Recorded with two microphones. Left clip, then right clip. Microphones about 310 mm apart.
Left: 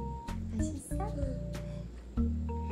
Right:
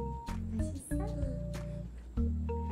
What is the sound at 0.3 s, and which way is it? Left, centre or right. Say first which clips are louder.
Music: left 2 dB; centre.